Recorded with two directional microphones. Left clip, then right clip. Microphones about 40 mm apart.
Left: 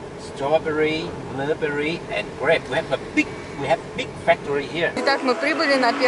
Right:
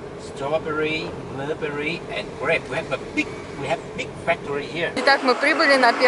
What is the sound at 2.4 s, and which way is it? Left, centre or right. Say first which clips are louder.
Speech: left 3 dB; left.